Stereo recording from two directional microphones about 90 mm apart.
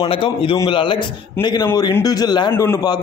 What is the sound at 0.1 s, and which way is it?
Speech, 75° left (ahead or behind).